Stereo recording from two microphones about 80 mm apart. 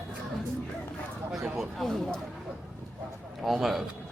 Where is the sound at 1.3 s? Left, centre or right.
Centre.